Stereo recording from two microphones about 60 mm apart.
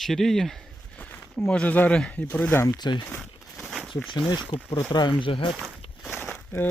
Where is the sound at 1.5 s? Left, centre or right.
Left.